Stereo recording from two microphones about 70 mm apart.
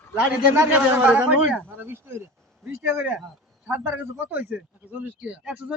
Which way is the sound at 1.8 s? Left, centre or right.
Right.